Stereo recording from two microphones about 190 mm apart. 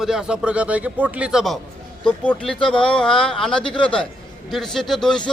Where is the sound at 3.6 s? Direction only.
25° left (ahead or behind).